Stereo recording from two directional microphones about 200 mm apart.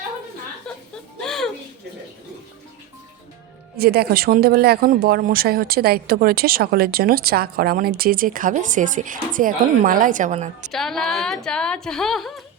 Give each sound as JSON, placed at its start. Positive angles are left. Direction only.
{"t": 1.2, "sound": "a sound", "side_deg": 0}
{"t": 3.8, "sound": "speech", "side_deg": -50}
{"t": 10.7, "sound": "a woman's voice", "side_deg": 0}